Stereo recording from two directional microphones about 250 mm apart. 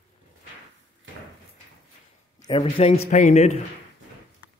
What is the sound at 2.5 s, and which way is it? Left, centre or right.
Speech, left.